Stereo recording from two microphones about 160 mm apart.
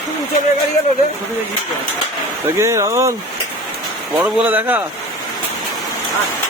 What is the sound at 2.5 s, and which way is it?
Speech, 15° right (ahead or behind).